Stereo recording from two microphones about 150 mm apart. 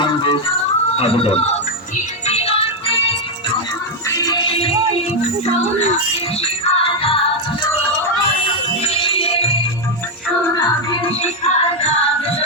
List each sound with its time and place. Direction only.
0.0 s a sound: 35° left (ahead or behind)
0.9 s speech: 40° left (ahead or behind)
2.2 s music: 45° left (ahead or behind)
4.1 s music: 25° left (ahead or behind)
6.4 s music: 40° left (ahead or behind)
8.8 s music: 40° left (ahead or behind)
10.5 s music: 30° left (ahead or behind)
11.2 s music: 45° left (ahead or behind)